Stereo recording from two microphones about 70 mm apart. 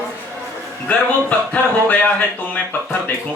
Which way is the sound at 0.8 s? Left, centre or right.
Left.